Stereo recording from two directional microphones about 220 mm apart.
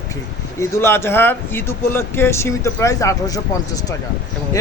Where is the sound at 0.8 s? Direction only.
10° left (ahead or behind).